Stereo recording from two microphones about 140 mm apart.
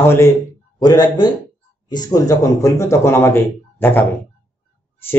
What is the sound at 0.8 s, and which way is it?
Speech, 30° left (ahead or behind).